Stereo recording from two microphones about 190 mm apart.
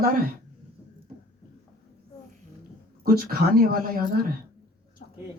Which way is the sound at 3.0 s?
50° right (ahead or behind).